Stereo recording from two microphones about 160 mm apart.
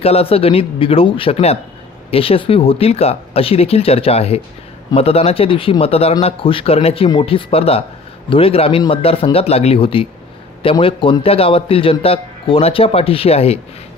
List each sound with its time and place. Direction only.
0.0 s a man's voice: 40° left (ahead or behind)